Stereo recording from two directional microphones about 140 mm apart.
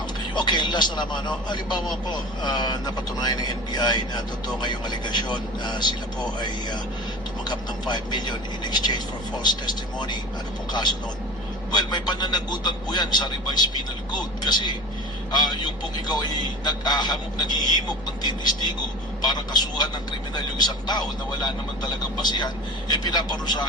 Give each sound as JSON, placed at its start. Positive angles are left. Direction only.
{"t": 0.3, "sound": "speech", "side_deg": 30}